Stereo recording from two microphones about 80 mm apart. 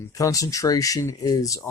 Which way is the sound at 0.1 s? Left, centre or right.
Left.